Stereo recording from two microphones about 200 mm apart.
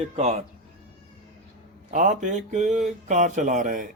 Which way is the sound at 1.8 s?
40° right (ahead or behind).